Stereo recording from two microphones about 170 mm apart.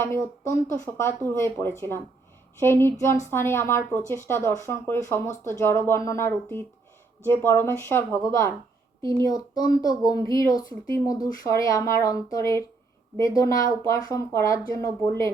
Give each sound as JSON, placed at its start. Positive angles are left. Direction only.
{"t": 0.0, "sound": "a woman's voice", "side_deg": 15}